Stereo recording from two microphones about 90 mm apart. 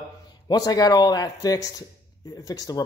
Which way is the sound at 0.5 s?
45° left (ahead or behind).